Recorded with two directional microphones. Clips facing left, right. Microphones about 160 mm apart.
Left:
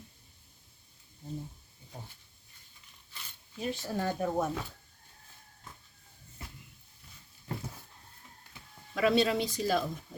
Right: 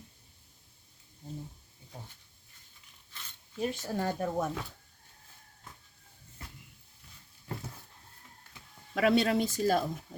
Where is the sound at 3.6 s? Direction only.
45° right (ahead or behind).